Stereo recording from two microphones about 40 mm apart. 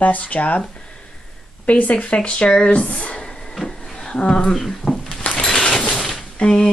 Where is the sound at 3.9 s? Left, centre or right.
Centre.